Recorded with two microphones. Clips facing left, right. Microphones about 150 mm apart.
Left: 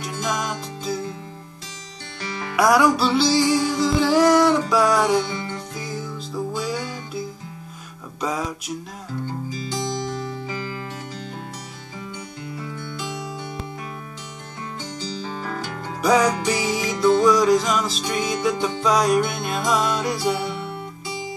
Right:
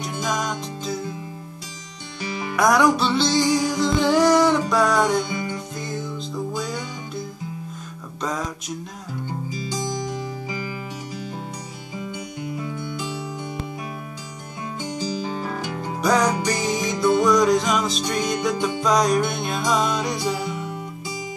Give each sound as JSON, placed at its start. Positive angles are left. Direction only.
{"t": 0.0, "sound": "music", "side_deg": 5}
{"t": 2.2, "sound": "music", "side_deg": -15}
{"t": 2.5, "sound": "music", "side_deg": 5}
{"t": 5.3, "sound": "music", "side_deg": -15}
{"t": 5.8, "sound": "music", "side_deg": 5}
{"t": 9.2, "sound": "music", "side_deg": -15}
{"t": 12.4, "sound": "music", "side_deg": -15}
{"t": 14.8, "sound": "music", "side_deg": -15}
{"t": 16.0, "sound": "music", "side_deg": 5}